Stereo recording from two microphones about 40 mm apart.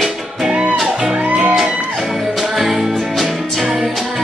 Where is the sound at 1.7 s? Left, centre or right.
Right.